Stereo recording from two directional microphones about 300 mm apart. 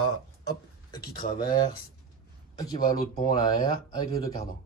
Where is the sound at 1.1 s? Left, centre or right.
Left.